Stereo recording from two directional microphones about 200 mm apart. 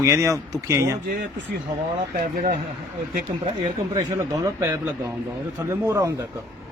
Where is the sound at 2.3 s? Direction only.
45° right (ahead or behind).